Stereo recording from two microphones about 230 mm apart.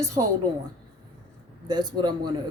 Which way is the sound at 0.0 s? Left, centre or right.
Centre.